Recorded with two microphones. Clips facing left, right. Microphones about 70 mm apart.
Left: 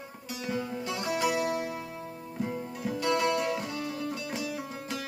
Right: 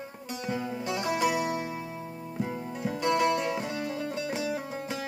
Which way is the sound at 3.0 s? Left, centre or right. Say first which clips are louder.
Right 2 dB; right.